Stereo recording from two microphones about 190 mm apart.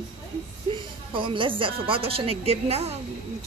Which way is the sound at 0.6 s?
25° right (ahead or behind).